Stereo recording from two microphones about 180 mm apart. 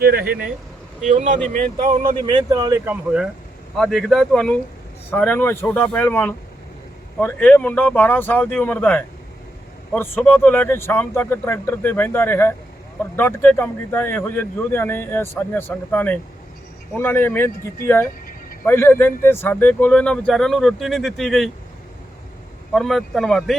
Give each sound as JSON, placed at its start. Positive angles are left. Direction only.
{"t": 0.0, "sound": "speech", "side_deg": -60}
{"t": 1.0, "sound": "speech", "side_deg": -40}
{"t": 2.2, "sound": "speech", "side_deg": -25}
{"t": 2.8, "sound": "a man's voice", "side_deg": -5}
{"t": 22.7, "sound": "speech", "side_deg": 0}